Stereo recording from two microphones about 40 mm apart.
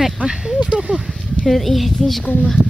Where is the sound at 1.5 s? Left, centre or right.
Centre.